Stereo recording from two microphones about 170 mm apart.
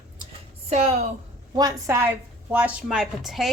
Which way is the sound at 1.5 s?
20° right (ahead or behind).